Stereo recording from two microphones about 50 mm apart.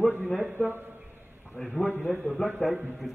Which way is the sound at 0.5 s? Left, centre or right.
Right.